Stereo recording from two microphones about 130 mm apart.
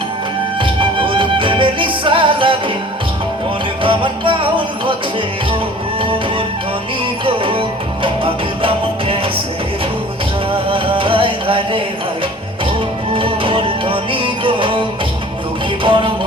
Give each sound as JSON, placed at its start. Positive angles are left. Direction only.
{"t": 0.6, "sound": "music", "side_deg": -40}
{"t": 3.8, "sound": "music", "side_deg": -40}
{"t": 7.3, "sound": "music", "side_deg": -45}
{"t": 10.5, "sound": "music", "side_deg": -40}
{"t": 13.1, "sound": "music", "side_deg": -40}
{"t": 15.8, "sound": "music", "side_deg": -40}